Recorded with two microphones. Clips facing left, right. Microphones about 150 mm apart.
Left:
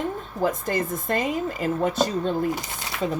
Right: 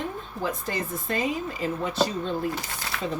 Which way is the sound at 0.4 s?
50° left (ahead or behind).